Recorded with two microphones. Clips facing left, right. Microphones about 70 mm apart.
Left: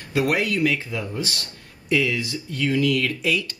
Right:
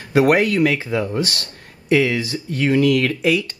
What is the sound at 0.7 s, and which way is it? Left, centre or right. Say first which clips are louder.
Speech: right 7 dB; right.